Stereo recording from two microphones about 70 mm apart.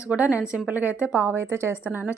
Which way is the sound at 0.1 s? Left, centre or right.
Centre.